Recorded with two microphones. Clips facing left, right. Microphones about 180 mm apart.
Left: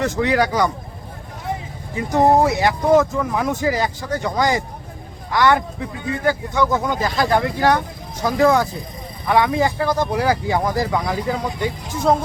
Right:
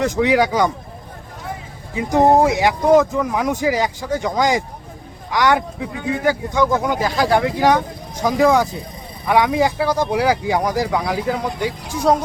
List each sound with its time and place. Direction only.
0.0 s speech: 15° right (ahead or behind)
2.0 s speech: 15° right (ahead or behind)